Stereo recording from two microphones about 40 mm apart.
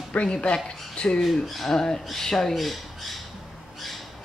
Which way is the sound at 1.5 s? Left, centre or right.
Centre.